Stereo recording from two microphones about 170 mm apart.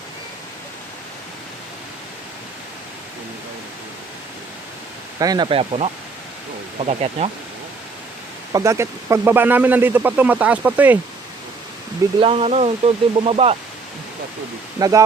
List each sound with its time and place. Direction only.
5.2 s speech: 25° right (ahead or behind)
8.5 s speech: 15° right (ahead or behind)
12.2 s speech: 35° right (ahead or behind)
14.8 s speech: 20° right (ahead or behind)